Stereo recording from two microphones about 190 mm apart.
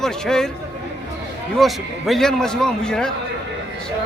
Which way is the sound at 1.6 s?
Centre (ahead or behind).